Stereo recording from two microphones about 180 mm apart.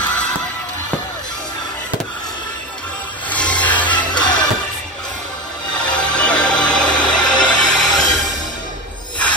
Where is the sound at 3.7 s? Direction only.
25° left (ahead or behind).